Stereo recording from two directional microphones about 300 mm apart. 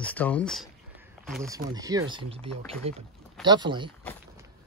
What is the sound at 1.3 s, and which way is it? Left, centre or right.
Speech, centre.